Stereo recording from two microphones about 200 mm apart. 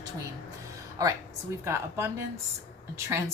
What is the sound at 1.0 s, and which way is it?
A woman's voice, 15° right (ahead or behind).